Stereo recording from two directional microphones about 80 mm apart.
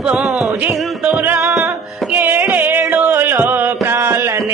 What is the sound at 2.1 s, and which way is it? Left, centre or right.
Music, right.